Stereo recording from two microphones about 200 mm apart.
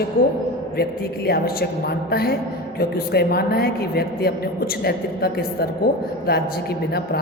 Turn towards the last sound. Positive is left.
turn(degrees=50)  # may be behind; listen again after turning